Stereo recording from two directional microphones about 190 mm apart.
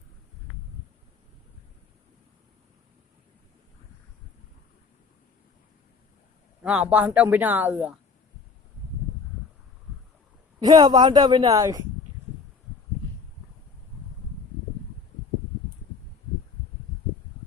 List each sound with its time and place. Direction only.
6.6 s speech: 5° right (ahead or behind)
10.6 s a woman's voice: 20° right (ahead or behind)